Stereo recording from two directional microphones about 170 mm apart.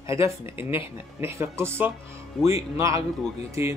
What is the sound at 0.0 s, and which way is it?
Speech, 15° right (ahead or behind).